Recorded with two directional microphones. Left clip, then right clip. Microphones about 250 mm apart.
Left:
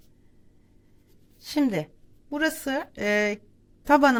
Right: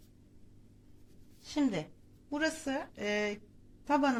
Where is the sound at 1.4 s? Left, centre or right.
Left.